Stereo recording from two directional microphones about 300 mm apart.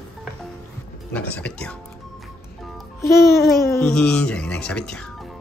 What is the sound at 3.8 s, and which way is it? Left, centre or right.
Speech, centre.